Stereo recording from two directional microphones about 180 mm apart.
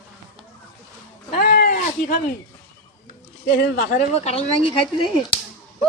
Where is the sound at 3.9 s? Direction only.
35° left (ahead or behind).